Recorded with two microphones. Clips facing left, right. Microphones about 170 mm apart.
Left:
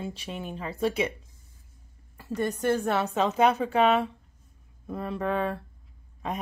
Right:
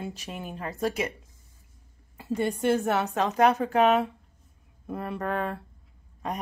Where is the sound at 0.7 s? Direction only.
40° right (ahead or behind).